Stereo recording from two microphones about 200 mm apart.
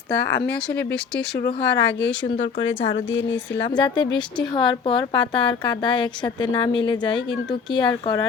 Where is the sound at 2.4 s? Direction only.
30° left (ahead or behind).